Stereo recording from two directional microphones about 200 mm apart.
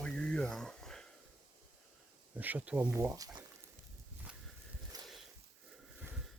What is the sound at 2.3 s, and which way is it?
Speech, 10° right (ahead or behind).